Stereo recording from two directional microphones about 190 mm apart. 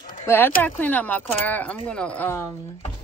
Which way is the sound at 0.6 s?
10° left (ahead or behind).